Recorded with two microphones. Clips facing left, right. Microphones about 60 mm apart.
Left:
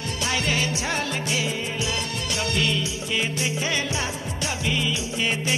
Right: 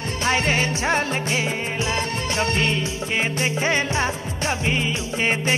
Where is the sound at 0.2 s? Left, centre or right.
Right.